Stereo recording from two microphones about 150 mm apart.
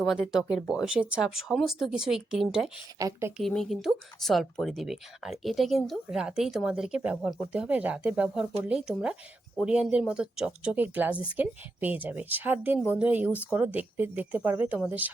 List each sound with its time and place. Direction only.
0.0 s speech: centre (ahead or behind)
3.0 s speech: 20° right (ahead or behind)
3.3 s speech: centre (ahead or behind)